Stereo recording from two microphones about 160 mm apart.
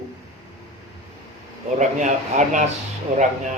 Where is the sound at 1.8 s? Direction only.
50° right (ahead or behind).